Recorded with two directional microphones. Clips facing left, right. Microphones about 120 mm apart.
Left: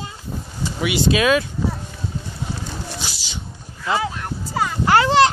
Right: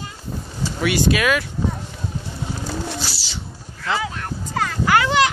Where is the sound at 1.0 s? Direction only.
25° left (ahead or behind).